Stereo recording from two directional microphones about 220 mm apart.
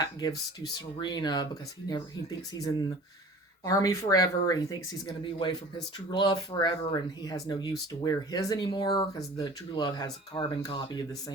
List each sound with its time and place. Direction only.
0.0 s speech: 15° left (ahead or behind)
2.5 s speech: 15° left (ahead or behind)